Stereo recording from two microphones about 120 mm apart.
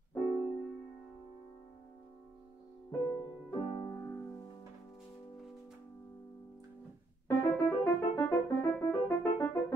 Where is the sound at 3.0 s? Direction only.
30° left (ahead or behind).